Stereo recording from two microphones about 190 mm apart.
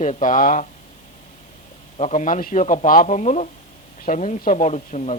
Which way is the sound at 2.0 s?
40° left (ahead or behind).